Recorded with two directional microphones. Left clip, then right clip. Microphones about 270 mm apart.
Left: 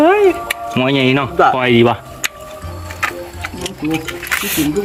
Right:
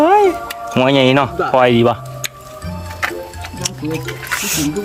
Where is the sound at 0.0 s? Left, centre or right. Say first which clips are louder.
Even; centre.